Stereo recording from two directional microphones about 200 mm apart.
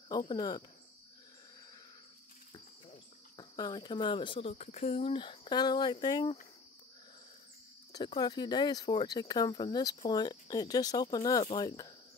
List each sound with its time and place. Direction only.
0.1 s speech: 20° left (ahead or behind)
3.3 s speech: 20° left (ahead or behind)
7.9 s speech: 20° left (ahead or behind)